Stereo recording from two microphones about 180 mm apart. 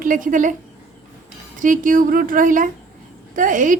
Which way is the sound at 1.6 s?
45° right (ahead or behind).